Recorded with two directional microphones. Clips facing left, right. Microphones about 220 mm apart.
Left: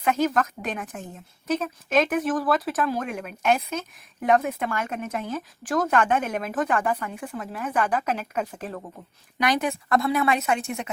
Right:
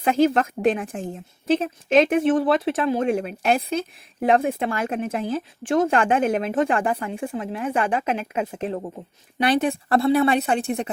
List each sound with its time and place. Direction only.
0.0 s speech: 30° right (ahead or behind)